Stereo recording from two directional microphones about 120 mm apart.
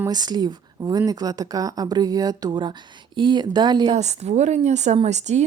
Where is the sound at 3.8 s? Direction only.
65° right (ahead or behind).